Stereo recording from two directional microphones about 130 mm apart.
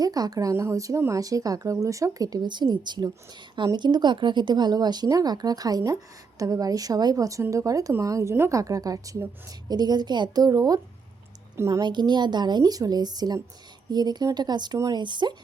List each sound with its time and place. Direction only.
0.0 s a woman's voice: 30° right (ahead or behind)
11.8 s speech: 35° right (ahead or behind)